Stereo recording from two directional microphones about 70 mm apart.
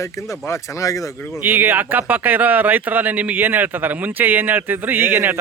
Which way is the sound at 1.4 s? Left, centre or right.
Right.